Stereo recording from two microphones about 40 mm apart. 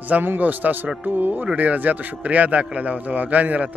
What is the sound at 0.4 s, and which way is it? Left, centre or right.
A man's voice, right.